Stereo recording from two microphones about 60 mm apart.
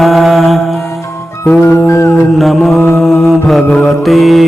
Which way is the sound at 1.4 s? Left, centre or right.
Left.